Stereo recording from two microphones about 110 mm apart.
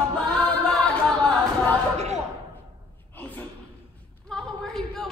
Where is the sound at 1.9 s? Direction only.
90° right.